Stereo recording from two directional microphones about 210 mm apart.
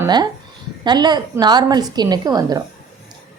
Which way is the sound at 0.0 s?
20° right (ahead or behind).